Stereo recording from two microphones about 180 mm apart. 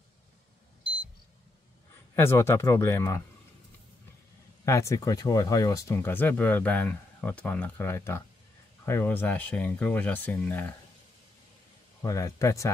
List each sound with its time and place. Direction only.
2.1 s speech: 15° left (ahead or behind)
4.6 s speech: 15° left (ahead or behind)
12.0 s speech: 20° left (ahead or behind)